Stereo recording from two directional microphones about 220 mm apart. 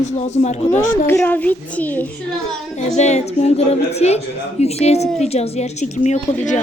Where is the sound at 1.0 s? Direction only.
10° left (ahead or behind).